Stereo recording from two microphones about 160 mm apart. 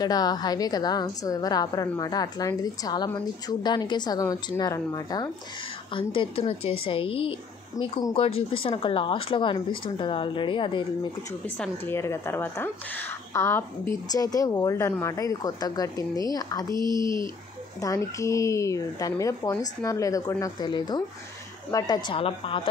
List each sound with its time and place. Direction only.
0.0 s speech: 25° left (ahead or behind)
5.9 s speech: 35° left (ahead or behind)
11.4 s speech: 10° left (ahead or behind)
17.0 s speech: 30° right (ahead or behind)
17.7 s speech: 20° left (ahead or behind)